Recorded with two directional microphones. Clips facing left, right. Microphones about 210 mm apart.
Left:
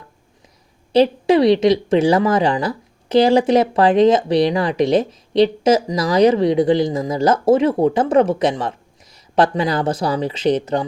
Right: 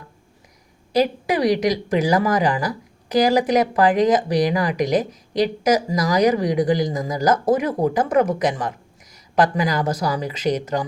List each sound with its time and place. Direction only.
0.9 s a woman's voice: 25° left (ahead or behind)